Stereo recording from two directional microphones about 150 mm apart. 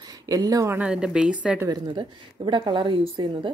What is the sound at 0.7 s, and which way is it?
Speech, 5° right (ahead or behind).